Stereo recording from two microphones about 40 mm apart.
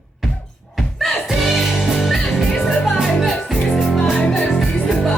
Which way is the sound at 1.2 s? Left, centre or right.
Centre.